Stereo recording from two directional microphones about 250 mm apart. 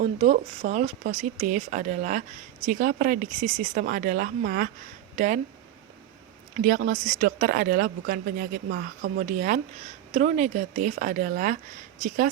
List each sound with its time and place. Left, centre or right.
0.0 s speech: right
6.6 s speech: right